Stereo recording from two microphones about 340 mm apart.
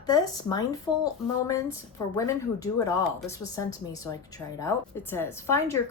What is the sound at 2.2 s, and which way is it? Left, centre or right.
A woman's voice, centre.